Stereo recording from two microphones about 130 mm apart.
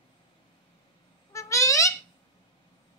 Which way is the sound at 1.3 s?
25° left (ahead or behind).